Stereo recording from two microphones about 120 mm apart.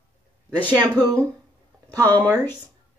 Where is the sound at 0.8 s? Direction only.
35° right (ahead or behind).